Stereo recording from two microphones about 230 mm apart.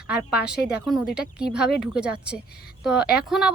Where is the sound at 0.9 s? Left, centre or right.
Centre.